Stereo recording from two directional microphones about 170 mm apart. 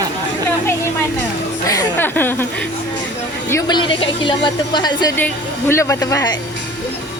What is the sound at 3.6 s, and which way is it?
Speech, 25° left (ahead or behind).